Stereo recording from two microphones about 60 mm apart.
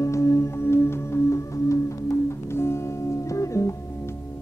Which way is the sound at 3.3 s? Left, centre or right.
Left.